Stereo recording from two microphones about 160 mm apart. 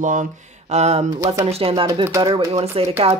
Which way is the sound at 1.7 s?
25° right (ahead or behind).